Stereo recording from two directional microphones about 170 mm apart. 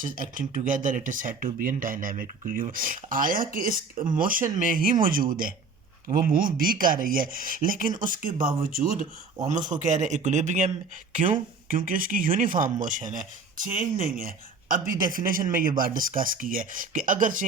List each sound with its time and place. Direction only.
0.2 s speech: 55° right (ahead or behind)
13.7 s speech: 55° right (ahead or behind)